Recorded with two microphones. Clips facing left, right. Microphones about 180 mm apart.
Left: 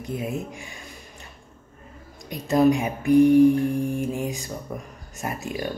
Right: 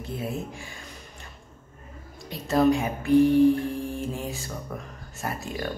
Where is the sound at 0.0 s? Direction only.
15° left (ahead or behind).